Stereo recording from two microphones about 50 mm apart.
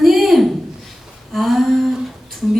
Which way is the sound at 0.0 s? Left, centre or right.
Centre.